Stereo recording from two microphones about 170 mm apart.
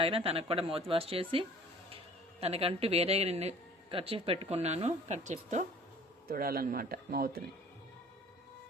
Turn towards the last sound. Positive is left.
turn(degrees=-60)  # may be behind; listen again after turning